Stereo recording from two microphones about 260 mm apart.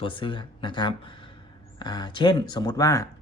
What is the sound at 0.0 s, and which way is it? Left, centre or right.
Speech, centre.